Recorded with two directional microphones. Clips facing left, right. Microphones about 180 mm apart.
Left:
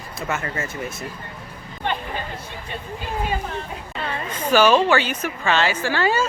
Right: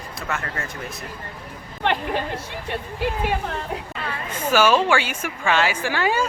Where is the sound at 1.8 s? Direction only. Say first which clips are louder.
Right 4 dB; 75° right (ahead or behind).